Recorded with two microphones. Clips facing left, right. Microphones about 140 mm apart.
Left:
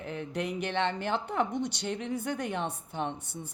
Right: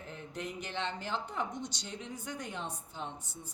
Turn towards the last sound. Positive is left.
turn(degrees=65)  # may be behind; listen again after turning